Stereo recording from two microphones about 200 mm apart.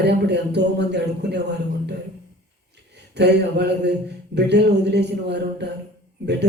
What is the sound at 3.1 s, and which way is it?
A man's voice, 55° right (ahead or behind).